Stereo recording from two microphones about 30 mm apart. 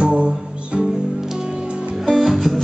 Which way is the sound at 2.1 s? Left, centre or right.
Centre.